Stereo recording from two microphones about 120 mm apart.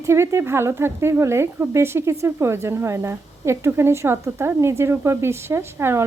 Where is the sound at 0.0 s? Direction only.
25° right (ahead or behind).